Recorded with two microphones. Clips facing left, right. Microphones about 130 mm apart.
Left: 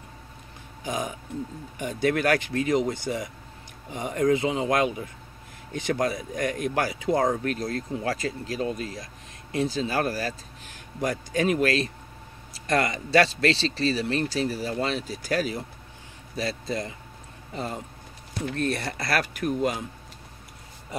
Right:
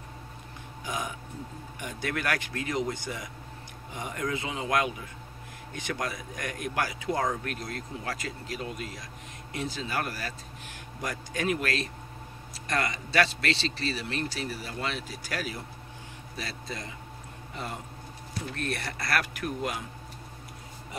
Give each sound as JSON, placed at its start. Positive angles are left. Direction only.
{"t": 1.9, "sound": "speech", "side_deg": 30}
{"t": 18.6, "sound": "speech", "side_deg": 30}